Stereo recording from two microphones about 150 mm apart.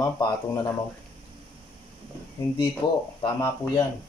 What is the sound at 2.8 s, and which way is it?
Speech, 30° left (ahead or behind).